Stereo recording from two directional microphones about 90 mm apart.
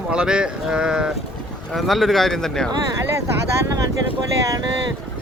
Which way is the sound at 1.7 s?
Centre (ahead or behind).